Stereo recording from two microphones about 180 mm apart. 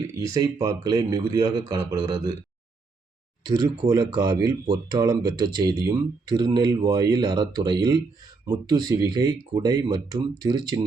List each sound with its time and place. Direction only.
0.1 s speech: 15° right (ahead or behind)
3.4 s speech: 20° right (ahead or behind)